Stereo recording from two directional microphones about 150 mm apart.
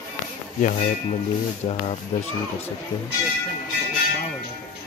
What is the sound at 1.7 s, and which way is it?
Speech, 45° left (ahead or behind).